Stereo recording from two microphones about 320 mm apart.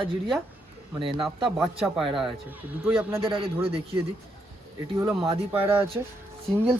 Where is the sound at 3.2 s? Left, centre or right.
Centre.